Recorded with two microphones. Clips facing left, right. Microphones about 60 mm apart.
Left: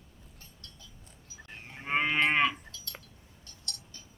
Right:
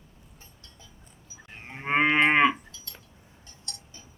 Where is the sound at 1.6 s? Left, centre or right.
Right.